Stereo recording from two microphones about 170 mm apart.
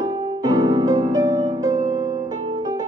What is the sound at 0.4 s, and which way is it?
Music, 20° right (ahead or behind).